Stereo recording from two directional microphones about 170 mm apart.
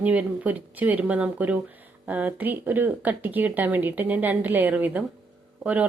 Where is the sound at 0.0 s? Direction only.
10° right (ahead or behind).